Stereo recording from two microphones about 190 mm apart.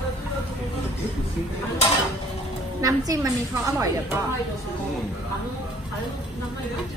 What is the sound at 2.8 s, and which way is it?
A woman's voice, 15° right (ahead or behind).